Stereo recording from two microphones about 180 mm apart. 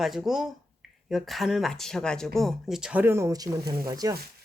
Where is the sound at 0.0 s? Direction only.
Centre (ahead or behind).